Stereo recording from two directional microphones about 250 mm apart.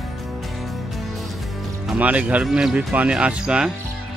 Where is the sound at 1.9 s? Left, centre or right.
Centre.